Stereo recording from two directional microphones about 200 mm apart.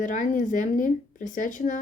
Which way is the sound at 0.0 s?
40° left (ahead or behind).